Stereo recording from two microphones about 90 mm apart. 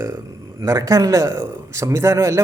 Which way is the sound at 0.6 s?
40° right (ahead or behind).